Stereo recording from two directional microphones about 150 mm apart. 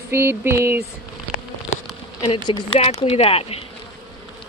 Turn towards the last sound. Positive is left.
turn(degrees=40)  # may be behind; listen again after turning